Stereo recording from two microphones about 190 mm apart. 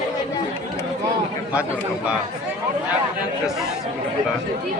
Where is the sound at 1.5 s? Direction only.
5° right (ahead or behind).